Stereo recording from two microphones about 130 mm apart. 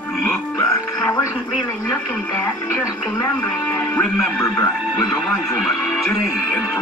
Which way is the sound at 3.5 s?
20° left (ahead or behind).